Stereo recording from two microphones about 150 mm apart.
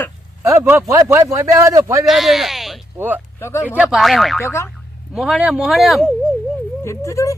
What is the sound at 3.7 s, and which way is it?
Speech, centre (ahead or behind).